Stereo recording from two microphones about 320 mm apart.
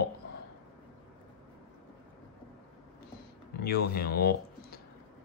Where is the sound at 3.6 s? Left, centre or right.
Left.